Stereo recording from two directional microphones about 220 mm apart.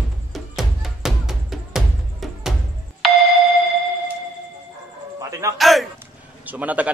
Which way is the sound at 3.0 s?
Centre (ahead or behind).